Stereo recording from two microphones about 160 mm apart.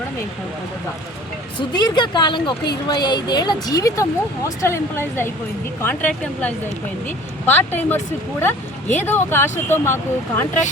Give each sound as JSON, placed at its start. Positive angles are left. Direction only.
{"t": 1.5, "sound": "speech", "side_deg": 30}
{"t": 9.0, "sound": "speech", "side_deg": 15}